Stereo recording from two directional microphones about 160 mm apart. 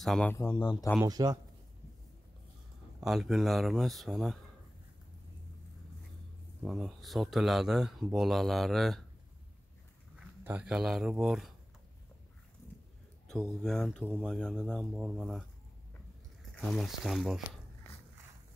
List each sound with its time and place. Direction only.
0.0 s speech: centre (ahead or behind)
0.6 s speech: 30° left (ahead or behind)
1.0 s speech: 25° right (ahead or behind)
3.0 s speech: centre (ahead or behind)
6.6 s speech: centre (ahead or behind)
10.4 s speech: 10° right (ahead or behind)
13.3 s speech: 5° left (ahead or behind)
16.5 s speech: centre (ahead or behind)